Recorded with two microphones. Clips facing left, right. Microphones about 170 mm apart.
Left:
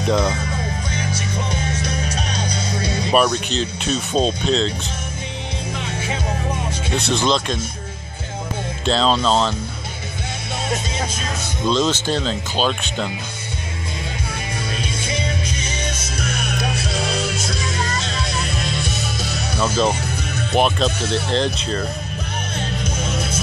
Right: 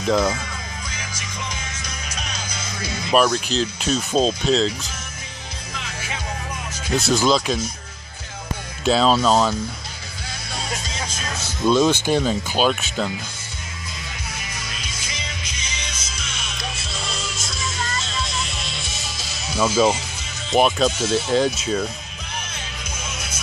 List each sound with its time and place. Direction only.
0.3 s music: 30° left (ahead or behind)
3.1 s speech: centre (ahead or behind)
7.0 s speech: 5° right (ahead or behind)
8.8 s speech: 10° right (ahead or behind)
11.6 s speech: 10° right (ahead or behind)
14.8 s music: 30° left (ahead or behind)
15.7 s music: 55° left (ahead or behind)
19.6 s speech: 5° right (ahead or behind)
23.0 s music: 30° left (ahead or behind)